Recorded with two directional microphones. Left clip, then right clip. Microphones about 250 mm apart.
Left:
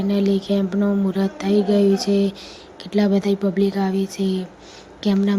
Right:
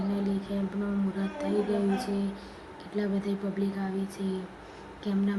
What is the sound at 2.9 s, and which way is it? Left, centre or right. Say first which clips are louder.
Speech: left 12 dB; left.